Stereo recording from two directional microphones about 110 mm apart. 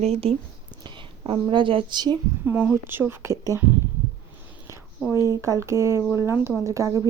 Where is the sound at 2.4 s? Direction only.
15° right (ahead or behind).